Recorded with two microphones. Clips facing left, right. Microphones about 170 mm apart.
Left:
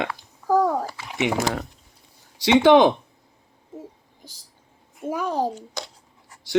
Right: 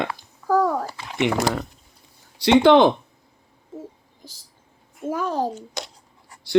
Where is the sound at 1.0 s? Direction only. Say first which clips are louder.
Right 2 dB; 10° left (ahead or behind).